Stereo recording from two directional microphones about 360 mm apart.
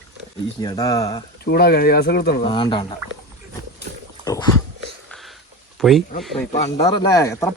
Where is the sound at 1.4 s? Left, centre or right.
Left.